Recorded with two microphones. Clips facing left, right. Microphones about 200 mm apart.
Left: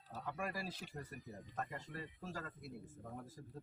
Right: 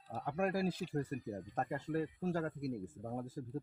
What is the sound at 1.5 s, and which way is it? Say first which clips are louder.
Speech: right 9 dB; 55° right (ahead or behind).